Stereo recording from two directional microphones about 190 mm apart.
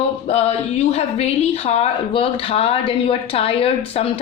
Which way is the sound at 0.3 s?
35° left (ahead or behind).